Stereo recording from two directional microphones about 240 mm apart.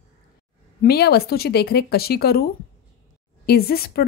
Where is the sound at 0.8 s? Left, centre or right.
Left.